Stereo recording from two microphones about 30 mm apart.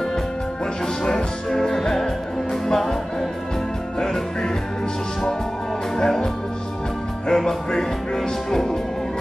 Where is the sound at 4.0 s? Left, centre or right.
Centre.